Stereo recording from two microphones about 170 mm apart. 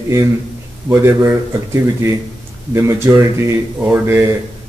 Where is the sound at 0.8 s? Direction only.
15° right (ahead or behind).